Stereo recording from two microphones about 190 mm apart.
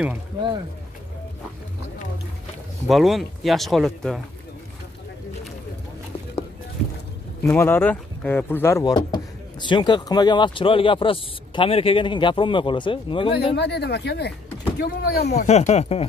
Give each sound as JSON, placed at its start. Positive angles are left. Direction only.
{"t": 2.9, "sound": "speech", "side_deg": 0}
{"t": 7.4, "sound": "speech", "side_deg": 15}
{"t": 13.6, "sound": "speech", "side_deg": 60}
{"t": 15.3, "sound": "speech", "side_deg": 35}